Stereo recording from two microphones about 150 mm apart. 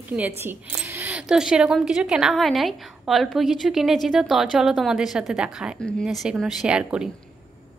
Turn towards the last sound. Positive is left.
turn(degrees=-5)  # may be behind; listen again after turning